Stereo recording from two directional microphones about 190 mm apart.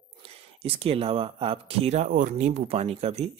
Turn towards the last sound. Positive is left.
turn(degrees=-35)  # may be behind; listen again after turning